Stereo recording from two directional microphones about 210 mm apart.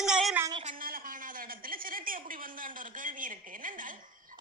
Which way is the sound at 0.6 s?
40° right (ahead or behind).